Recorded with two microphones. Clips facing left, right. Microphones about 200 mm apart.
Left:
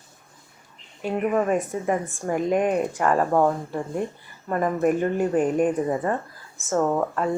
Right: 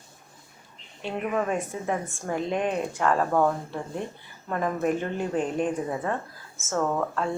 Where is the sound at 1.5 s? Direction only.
5° left (ahead or behind).